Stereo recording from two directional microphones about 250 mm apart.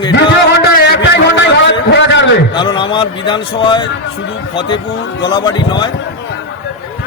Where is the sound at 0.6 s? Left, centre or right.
Left.